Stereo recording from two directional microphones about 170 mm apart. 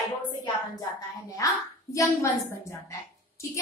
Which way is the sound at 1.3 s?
20° left (ahead or behind).